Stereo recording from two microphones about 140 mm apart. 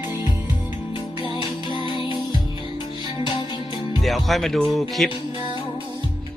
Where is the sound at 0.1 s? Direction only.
30° left (ahead or behind).